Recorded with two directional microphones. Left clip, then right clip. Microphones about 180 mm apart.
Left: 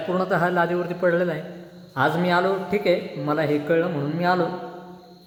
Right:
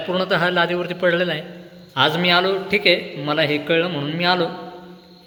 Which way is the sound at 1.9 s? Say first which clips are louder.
Right 4 dB; centre (ahead or behind).